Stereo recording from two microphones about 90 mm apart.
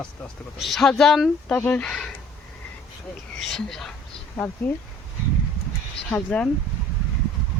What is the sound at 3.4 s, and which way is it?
Speech, 5° left (ahead or behind).